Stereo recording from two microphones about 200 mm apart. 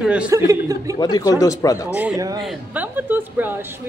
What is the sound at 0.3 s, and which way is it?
Speech, 15° right (ahead or behind).